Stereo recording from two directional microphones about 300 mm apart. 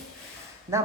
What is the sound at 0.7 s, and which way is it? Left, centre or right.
Speech, centre.